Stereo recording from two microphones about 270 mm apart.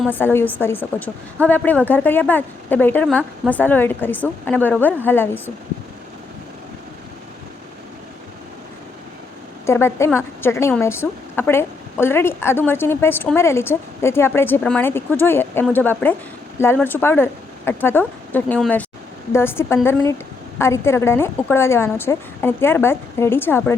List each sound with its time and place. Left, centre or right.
0.0 s a woman's voice: centre
9.6 s a woman's voice: centre